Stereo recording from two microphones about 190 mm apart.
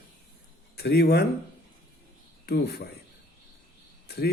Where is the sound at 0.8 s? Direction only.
60° left (ahead or behind).